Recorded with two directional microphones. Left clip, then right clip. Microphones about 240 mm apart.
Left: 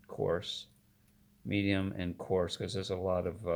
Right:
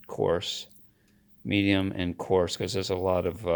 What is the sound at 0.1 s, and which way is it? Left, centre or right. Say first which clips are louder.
Speech: right 7 dB; right.